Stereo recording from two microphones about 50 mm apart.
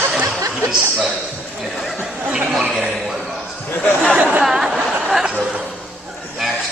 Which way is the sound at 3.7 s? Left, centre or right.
Left.